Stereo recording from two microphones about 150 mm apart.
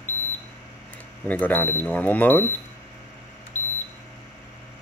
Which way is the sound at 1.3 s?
10° left (ahead or behind).